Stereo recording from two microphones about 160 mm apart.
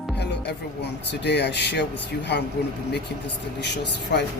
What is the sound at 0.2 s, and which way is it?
Speech, 90° left.